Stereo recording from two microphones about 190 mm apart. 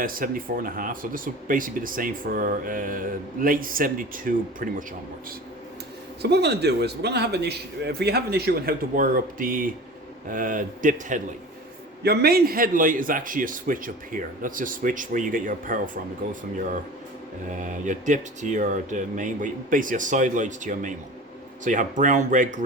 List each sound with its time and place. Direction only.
0.0 s speech: 50° right (ahead or behind)
6.2 s a man's voice: 60° right (ahead or behind); by 11.2 s 45° right (ahead or behind)
12.0 s speech: 55° right (ahead or behind)